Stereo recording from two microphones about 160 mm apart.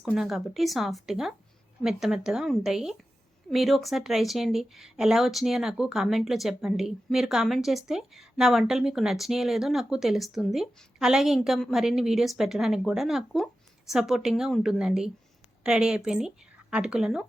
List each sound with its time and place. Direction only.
0.0 s a woman's voice: centre (ahead or behind)